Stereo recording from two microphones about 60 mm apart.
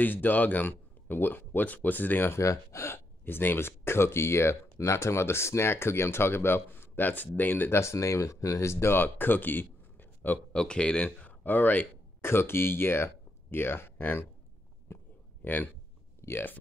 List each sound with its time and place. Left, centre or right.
0.0 s speech: left
2.4 s speech: left
2.9 s speech: left
7.8 s speech: left
10.5 s speech: centre; by 14.2 s left
14.9 s a sound: left
15.4 s speech: left
16.2 s a sound: left